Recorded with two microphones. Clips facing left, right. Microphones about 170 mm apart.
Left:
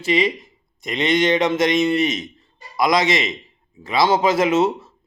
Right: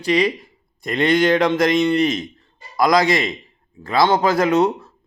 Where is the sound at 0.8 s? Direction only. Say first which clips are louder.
Right 3 dB; 55° right (ahead or behind).